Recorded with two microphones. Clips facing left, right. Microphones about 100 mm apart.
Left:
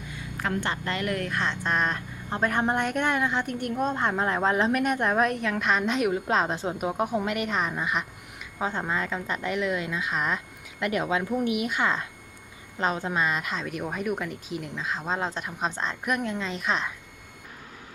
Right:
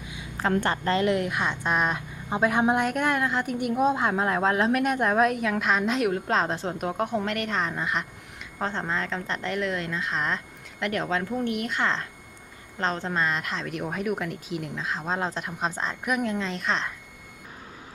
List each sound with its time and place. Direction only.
0.3 s a sound: 30° right (ahead or behind)
0.6 s a woman's voice: 45° right (ahead or behind)
0.9 s speech: 20° right (ahead or behind); by 16.9 s 5° left (ahead or behind)